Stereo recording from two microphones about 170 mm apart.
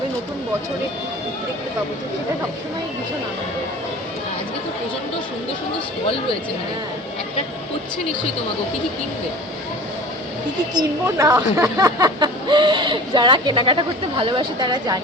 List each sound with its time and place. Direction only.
11.0 s speech: 20° right (ahead or behind)